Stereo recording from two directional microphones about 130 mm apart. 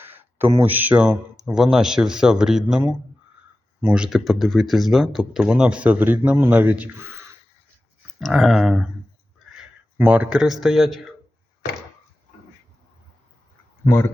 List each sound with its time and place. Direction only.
0.0 s speech: 15° right (ahead or behind)
8.2 s speech: centre (ahead or behind)
10.0 s speech: 10° right (ahead or behind)
13.8 s speech: 20° left (ahead or behind)